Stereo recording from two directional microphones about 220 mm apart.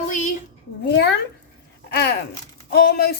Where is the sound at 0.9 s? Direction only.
50° left (ahead or behind).